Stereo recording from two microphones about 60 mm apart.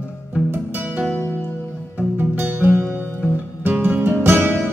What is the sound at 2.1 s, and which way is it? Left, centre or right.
Music, right.